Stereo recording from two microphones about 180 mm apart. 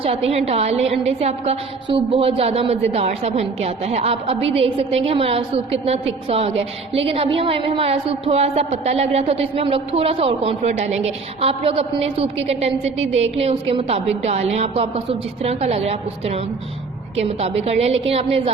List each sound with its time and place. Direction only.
0.0 s a woman's voice: 35° right (ahead or behind)
17.4 s a woman's voice: 35° right (ahead or behind)